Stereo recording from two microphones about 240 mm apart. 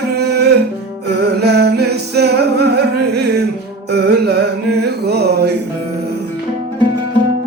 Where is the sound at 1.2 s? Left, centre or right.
Right.